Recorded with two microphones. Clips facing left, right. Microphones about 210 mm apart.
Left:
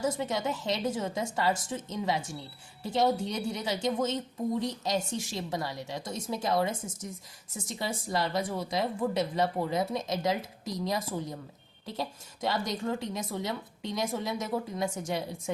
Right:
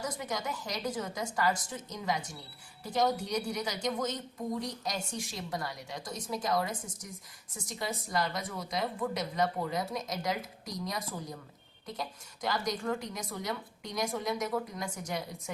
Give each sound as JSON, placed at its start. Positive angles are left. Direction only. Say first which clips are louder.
{"t": 0.0, "sound": "a woman's voice", "louder": "left 6 dB", "side_deg": 25}